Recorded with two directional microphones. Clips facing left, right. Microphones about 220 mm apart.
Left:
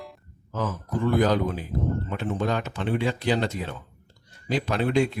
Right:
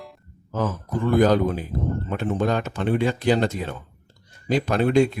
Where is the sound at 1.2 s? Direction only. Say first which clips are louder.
Right 6 dB; 45° right (ahead or behind).